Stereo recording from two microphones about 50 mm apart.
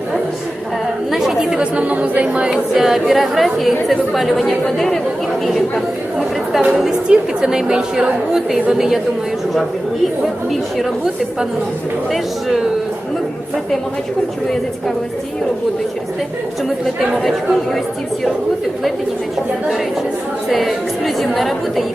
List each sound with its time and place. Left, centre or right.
1.1 s chatter: centre
1.8 s speech: right
2.5 s a woman's voice: centre
6.6 s a woman's voice: centre
10.5 s speech: centre
12.1 s speech: centre
14.4 s a woman's voice: centre
17.2 s speech: centre
20.5 s speech: centre